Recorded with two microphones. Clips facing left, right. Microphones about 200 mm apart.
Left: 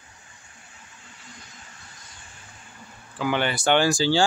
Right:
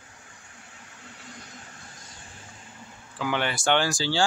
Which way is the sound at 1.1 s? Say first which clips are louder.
Right 3 dB; 60° right (ahead or behind).